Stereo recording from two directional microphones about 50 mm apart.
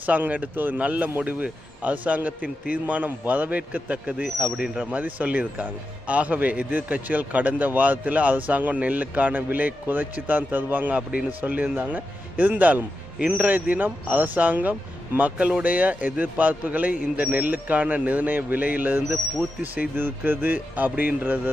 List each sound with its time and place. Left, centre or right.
0.0 s a man's voice: right
4.5 s speech: centre
4.8 s a man's voice: right